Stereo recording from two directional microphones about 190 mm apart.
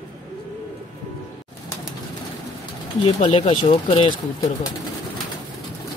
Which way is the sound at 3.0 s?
30° left (ahead or behind).